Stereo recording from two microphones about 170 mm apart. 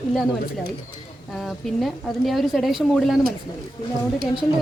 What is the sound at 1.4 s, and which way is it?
A woman's voice, centre (ahead or behind).